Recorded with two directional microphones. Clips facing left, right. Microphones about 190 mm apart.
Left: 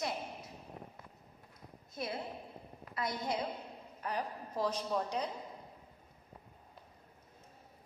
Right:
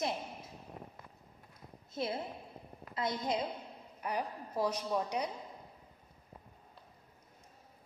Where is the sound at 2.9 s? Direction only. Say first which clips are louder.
Right 2 dB; 25° right (ahead or behind).